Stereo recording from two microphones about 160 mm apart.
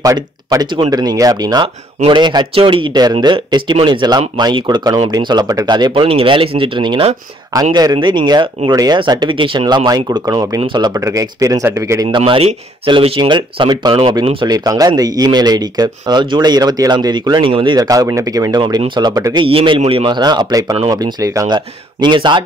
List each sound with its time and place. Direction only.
0.0 s speech: 20° right (ahead or behind)
12.1 s speech: 35° right (ahead or behind)